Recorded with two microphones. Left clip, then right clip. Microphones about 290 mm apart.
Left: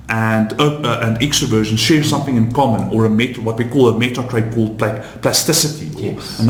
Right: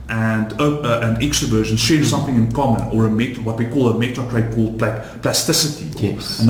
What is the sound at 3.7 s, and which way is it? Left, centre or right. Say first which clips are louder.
Speech: left 5 dB; left.